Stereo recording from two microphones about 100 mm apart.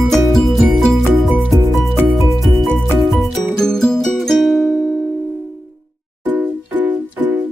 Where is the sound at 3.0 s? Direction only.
Centre (ahead or behind).